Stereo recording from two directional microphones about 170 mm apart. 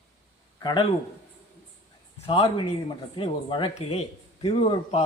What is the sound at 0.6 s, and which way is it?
Speech, 25° left (ahead or behind).